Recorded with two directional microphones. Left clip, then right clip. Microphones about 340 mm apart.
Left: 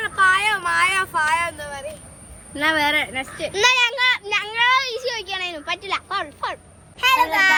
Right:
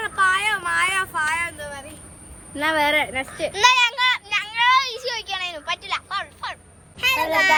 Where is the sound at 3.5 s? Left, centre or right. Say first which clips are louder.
Right 1 dB; centre.